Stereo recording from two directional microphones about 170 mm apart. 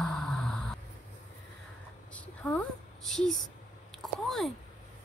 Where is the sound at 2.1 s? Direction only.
10° left (ahead or behind).